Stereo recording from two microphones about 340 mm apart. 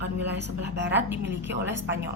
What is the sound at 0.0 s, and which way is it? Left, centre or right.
A woman's voice, right.